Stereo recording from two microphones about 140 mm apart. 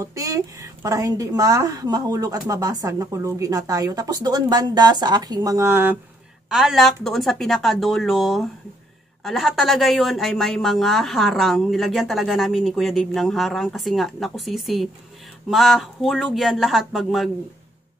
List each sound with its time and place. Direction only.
0.0 s a woman's voice: 25° right (ahead or behind)
6.5 s speech: centre (ahead or behind)